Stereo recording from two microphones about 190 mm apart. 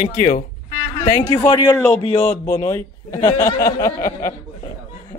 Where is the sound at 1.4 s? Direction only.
10° left (ahead or behind).